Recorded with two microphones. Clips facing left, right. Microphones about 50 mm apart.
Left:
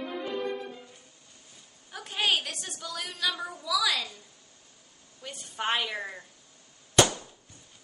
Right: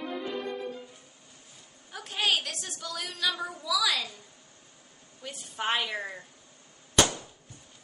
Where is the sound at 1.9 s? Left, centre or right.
Centre.